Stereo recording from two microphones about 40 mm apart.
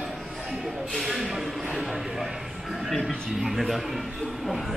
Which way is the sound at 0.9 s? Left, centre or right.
Centre.